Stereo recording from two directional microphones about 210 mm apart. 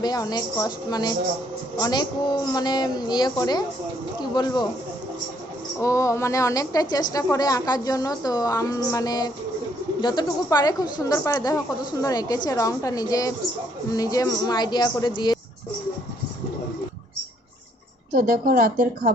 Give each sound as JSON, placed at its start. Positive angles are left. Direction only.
{"t": 0.0, "sound": "a woman's voice", "side_deg": 20}
{"t": 5.8, "sound": "a woman's voice", "side_deg": 15}
{"t": 18.1, "sound": "a woman's voice", "side_deg": -45}